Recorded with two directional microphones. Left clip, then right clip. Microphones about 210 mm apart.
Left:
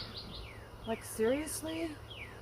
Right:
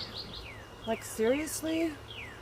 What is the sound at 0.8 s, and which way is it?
Speech, 35° right (ahead or behind).